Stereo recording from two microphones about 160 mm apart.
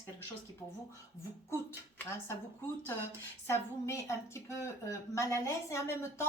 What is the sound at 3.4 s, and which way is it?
A woman's voice, 15° left (ahead or behind).